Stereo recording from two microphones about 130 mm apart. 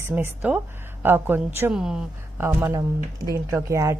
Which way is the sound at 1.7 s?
5° right (ahead or behind).